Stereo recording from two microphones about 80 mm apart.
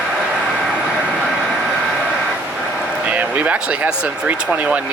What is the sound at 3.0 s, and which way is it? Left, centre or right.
Speech, centre.